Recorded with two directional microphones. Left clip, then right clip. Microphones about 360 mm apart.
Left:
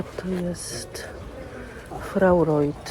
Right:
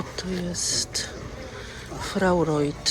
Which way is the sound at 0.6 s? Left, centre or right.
Centre.